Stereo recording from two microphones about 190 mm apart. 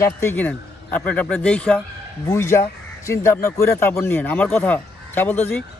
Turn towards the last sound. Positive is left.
turn(degrees=10)  # may be behind; listen again after turning